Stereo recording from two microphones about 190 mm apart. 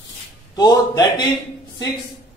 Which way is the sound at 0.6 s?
20° left (ahead or behind).